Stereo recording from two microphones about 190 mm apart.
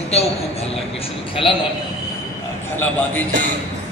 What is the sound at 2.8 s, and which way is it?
Speech, 10° left (ahead or behind).